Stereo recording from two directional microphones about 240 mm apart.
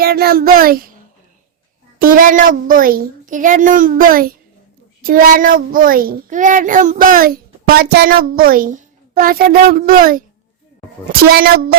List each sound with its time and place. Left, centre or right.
0.0 s a child's voice: right
2.0 s a child's voice: right
11.3 s a child's voice: right